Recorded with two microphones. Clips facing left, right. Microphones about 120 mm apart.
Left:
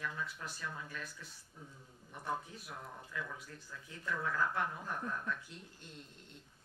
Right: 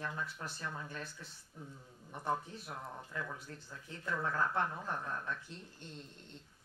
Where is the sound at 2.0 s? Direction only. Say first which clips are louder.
Right 3 dB; 30° right (ahead or behind).